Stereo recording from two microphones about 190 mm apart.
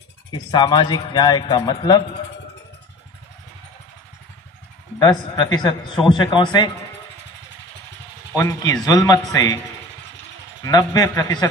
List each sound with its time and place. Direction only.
0.3 s speech: 25° left (ahead or behind)
4.9 s speech: 20° left (ahead or behind)
8.4 s speech: 15° left (ahead or behind)
10.6 s speech: 20° left (ahead or behind)